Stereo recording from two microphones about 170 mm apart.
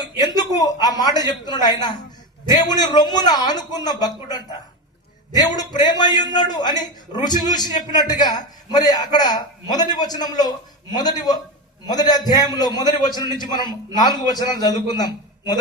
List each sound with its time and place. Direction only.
0.2 s a man's voice: 25° left (ahead or behind)